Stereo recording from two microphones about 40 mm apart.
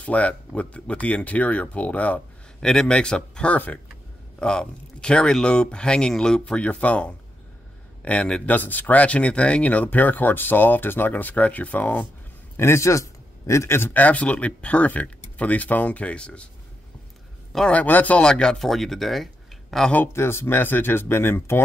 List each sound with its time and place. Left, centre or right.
0.0 s speech: left
2.6 s speech: centre
3.5 s speech: left
4.4 s speech: centre
8.5 s speech: left
9.8 s speech: left
12.6 s a man's voice: left
13.9 s speech: left
17.8 s speech: left
18.2 s speech: centre
18.6 s speech: centre
20.2 s speech: left